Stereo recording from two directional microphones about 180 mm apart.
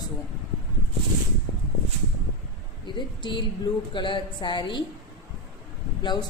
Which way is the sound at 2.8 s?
25° left (ahead or behind).